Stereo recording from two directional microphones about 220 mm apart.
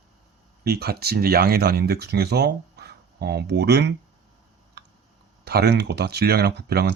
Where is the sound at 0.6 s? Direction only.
45° right (ahead or behind).